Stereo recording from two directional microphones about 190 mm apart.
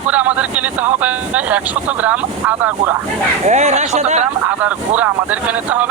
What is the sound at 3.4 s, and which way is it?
Speech, 35° right (ahead or behind).